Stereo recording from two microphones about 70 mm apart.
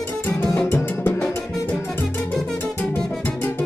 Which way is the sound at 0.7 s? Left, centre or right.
Left.